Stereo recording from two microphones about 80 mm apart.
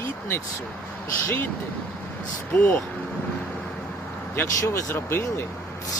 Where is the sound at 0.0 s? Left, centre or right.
Left.